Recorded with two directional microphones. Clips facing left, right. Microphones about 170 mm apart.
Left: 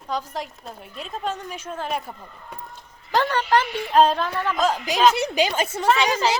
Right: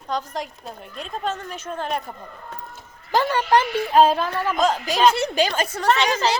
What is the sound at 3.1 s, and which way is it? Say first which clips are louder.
A woman's voice: right 1 dB; 10° right (ahead or behind).